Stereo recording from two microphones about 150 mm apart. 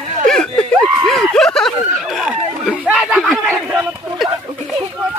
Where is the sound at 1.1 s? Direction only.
5° left (ahead or behind).